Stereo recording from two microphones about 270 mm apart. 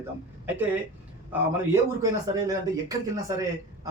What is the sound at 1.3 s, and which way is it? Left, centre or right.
A man's voice, centre.